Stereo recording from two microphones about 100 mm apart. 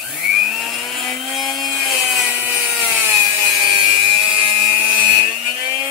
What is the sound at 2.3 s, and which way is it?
Wood, 15° right (ahead or behind).